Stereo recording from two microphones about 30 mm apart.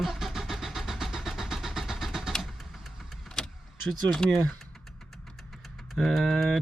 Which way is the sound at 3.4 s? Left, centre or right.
Left.